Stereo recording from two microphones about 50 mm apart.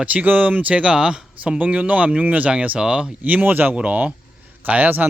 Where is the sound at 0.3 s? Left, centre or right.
Right; by 1.5 s centre.